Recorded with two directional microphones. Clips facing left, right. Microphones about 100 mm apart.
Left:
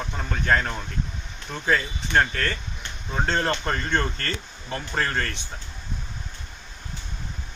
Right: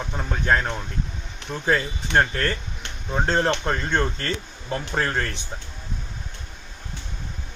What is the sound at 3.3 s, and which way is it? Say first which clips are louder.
Speech: right 3 dB; 15° right (ahead or behind).